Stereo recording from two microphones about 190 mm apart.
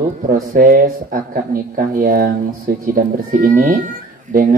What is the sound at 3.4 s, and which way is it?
Speech, 50° right (ahead or behind).